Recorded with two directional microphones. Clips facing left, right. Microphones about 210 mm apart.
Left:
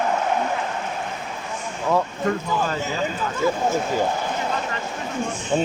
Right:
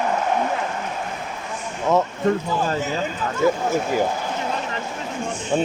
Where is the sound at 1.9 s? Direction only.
20° right (ahead or behind).